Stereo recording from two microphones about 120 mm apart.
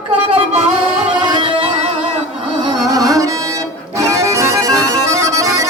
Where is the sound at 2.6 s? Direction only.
30° right (ahead or behind).